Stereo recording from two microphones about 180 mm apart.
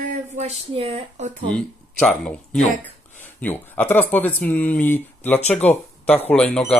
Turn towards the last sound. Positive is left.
turn(degrees=5)  # may be behind; listen again after turning